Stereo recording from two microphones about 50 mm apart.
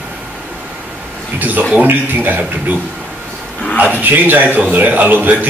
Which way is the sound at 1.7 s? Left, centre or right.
Right.